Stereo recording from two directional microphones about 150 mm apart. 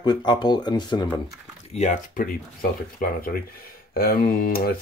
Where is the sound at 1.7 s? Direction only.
55° left (ahead or behind).